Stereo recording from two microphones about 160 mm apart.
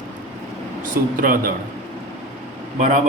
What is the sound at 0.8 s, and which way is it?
Speech, 60° right (ahead or behind).